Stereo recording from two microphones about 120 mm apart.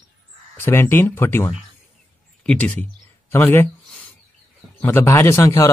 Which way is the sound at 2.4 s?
5° left (ahead or behind).